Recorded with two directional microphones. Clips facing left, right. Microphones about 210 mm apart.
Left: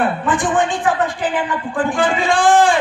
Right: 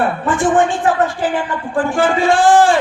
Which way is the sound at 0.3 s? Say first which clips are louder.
Right 6 dB; 15° left (ahead or behind).